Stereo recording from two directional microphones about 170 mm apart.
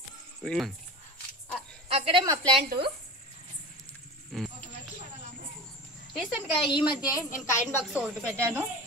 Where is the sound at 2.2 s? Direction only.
25° right (ahead or behind).